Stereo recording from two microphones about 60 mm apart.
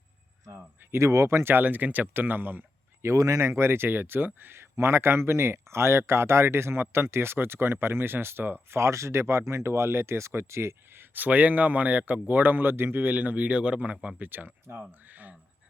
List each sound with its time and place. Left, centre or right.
0.9 s speech: right
3.2 s speech: right
3.4 s speech: right
8.7 s speech: right
11.1 s a man's voice: right